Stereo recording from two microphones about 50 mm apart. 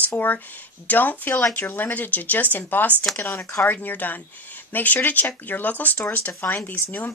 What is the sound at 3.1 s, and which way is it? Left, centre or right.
Speech, left.